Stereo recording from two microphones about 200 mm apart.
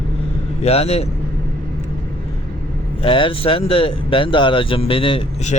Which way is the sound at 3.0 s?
25° left (ahead or behind).